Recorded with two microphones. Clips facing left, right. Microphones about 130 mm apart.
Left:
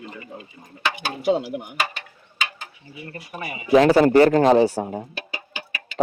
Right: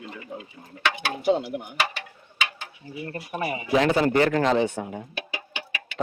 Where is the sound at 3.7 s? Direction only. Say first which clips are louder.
Left 7 dB; 40° left (ahead or behind).